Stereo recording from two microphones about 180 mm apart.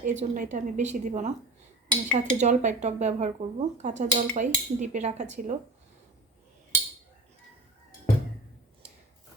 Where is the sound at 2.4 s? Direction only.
40° right (ahead or behind).